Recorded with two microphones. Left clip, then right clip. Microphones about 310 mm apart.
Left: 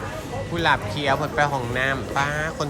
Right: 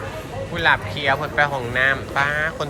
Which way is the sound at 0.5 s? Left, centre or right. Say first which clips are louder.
Right 3 dB; centre.